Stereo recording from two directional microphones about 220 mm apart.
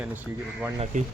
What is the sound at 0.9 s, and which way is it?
Speech, 35° right (ahead or behind).